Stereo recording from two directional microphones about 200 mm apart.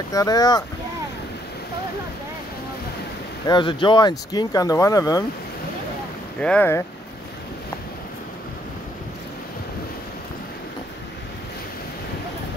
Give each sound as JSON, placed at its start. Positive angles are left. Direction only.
{"t": 0.1, "sound": "speech", "side_deg": 15}
{"t": 3.4, "sound": "speech", "side_deg": 25}
{"t": 6.4, "sound": "speech", "side_deg": 5}